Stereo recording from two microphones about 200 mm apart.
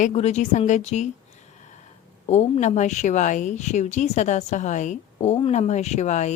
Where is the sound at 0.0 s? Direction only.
35° left (ahead or behind).